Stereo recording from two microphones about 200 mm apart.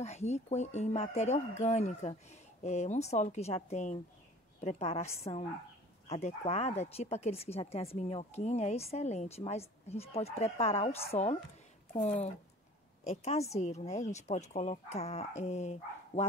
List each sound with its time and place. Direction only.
0.0 s speech: 35° left (ahead or behind)